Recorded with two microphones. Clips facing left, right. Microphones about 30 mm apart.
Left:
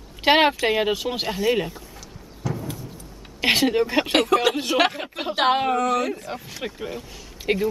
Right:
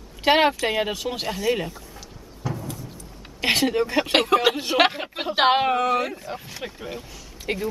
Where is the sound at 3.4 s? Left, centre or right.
Centre.